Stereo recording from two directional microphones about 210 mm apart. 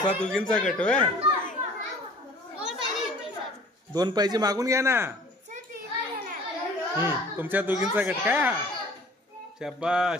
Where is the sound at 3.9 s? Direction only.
20° right (ahead or behind).